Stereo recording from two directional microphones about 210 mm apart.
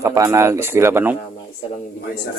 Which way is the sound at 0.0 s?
15° right (ahead or behind).